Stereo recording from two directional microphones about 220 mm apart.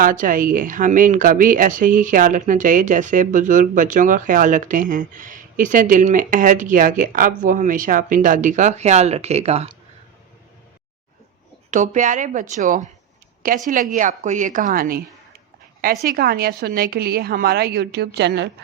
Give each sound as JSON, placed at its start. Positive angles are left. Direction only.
{"t": 0.0, "sound": "speech", "side_deg": -35}
{"t": 11.7, "sound": "speech", "side_deg": -35}
{"t": 16.1, "sound": "a woman's voice", "side_deg": -45}